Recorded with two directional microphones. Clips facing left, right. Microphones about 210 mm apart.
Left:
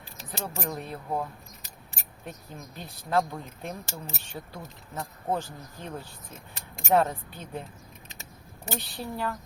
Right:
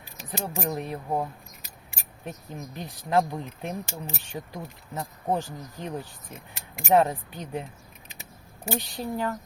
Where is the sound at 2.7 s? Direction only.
15° right (ahead or behind).